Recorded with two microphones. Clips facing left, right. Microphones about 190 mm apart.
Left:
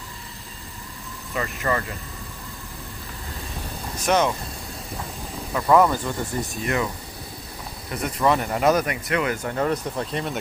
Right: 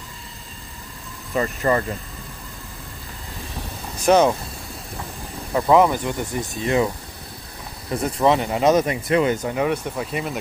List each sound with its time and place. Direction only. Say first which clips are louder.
1.3 s speech: right 5 dB; 35° right (ahead or behind)
4.0 s speech: right 5 dB; 35° right (ahead or behind)
5.7 s speech: right 1 dB; 15° right (ahead or behind)
7.9 s speech: right 3 dB; 25° right (ahead or behind)
9.5 s speech: right 2 dB; 5° right (ahead or behind)